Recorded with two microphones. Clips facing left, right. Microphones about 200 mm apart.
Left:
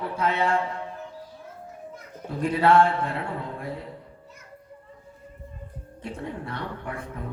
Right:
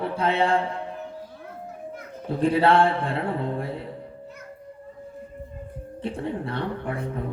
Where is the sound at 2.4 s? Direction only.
30° right (ahead or behind).